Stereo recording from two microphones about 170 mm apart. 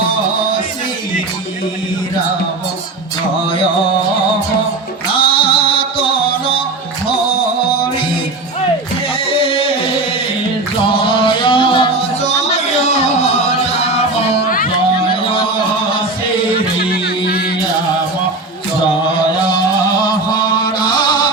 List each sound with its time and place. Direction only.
5.1 s music: 30° left (ahead or behind)
9.2 s music: 35° left (ahead or behind)
10.9 s music: 30° left (ahead or behind)
16.9 s music: 65° left (ahead or behind)
20.3 s music: 25° left (ahead or behind)